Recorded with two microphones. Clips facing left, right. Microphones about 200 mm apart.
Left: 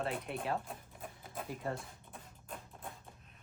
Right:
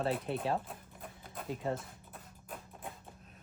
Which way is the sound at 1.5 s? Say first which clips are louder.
Right 4 dB; 20° right (ahead or behind).